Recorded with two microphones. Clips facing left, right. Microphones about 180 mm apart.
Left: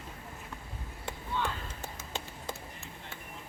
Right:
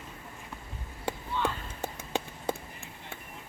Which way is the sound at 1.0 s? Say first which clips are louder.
Right 4 dB; 60° right (ahead or behind).